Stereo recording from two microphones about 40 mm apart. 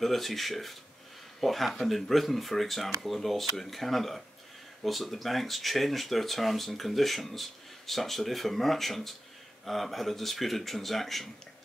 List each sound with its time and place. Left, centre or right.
0.0 s speech: centre